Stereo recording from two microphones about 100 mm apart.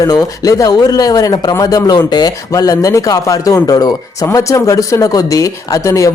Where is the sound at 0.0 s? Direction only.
40° left (ahead or behind).